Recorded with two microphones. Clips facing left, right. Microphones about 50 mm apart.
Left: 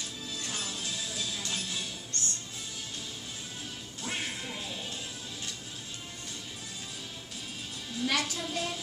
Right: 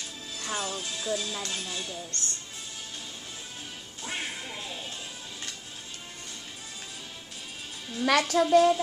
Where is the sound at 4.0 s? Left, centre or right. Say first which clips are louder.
Right 1 dB; centre.